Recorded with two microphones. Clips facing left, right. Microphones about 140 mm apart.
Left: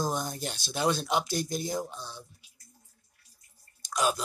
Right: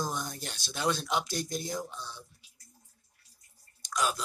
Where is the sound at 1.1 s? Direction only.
5° left (ahead or behind).